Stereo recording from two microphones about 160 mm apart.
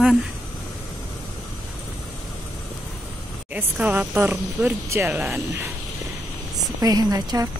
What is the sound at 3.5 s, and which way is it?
Speech, 10° right (ahead or behind).